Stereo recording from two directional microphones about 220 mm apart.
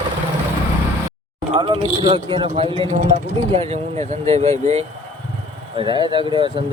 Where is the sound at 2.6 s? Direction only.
20° left (ahead or behind).